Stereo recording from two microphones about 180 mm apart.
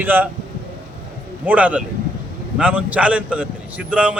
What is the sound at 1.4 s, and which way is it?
A man's voice, 10° right (ahead or behind).